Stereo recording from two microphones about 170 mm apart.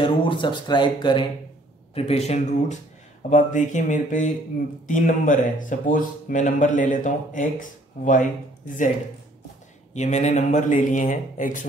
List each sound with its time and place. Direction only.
0.0 s speech: 30° left (ahead or behind); by 8.3 s 45° left (ahead or behind)
9.9 s speech: 45° left (ahead or behind)